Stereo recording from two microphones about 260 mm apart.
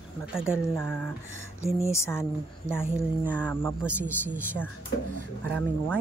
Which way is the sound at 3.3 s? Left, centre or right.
Centre.